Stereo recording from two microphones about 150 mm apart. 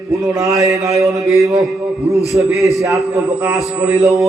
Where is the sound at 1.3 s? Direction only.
20° right (ahead or behind).